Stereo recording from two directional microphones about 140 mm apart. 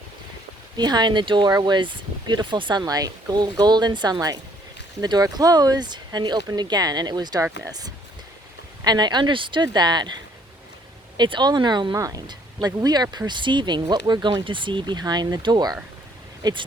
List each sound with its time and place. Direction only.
0.8 s speech: 30° right (ahead or behind)
11.2 s speech: 30° right (ahead or behind)